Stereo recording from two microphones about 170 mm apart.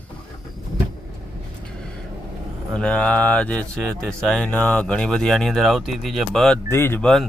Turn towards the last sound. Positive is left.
turn(degrees=5)  # may be behind; listen again after turning